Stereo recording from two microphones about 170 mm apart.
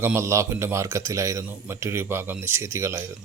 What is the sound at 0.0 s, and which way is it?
Speech, 15° right (ahead or behind).